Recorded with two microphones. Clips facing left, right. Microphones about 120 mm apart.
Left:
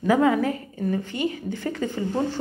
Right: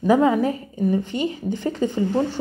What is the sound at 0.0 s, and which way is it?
Speech, 20° right (ahead or behind).